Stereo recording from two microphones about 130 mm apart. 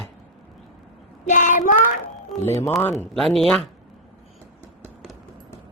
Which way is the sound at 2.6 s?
20° left (ahead or behind).